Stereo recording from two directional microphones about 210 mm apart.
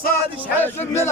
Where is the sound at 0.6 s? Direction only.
10° left (ahead or behind).